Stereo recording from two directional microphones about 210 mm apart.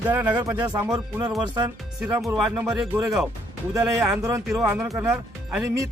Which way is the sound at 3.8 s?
15° right (ahead or behind).